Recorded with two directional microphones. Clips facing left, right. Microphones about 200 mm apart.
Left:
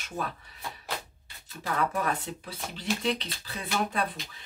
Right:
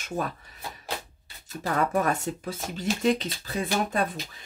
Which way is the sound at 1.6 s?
45° right (ahead or behind).